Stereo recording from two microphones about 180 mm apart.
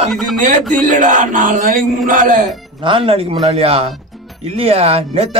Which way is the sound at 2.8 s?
30° right (ahead or behind).